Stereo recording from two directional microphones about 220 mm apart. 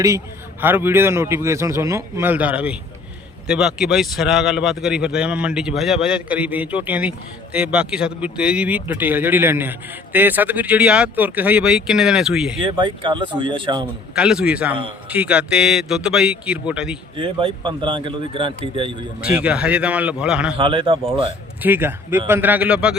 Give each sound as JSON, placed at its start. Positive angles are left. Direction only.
{"t": 0.6, "sound": "a man's voice", "side_deg": -10}
{"t": 12.6, "sound": "speech", "side_deg": -20}
{"t": 14.2, "sound": "speech", "side_deg": -5}
{"t": 17.2, "sound": "speech", "side_deg": -25}
{"t": 19.2, "sound": "speech", "side_deg": -5}
{"t": 20.6, "sound": "speech", "side_deg": -25}
{"t": 21.6, "sound": "a man's voice", "side_deg": -10}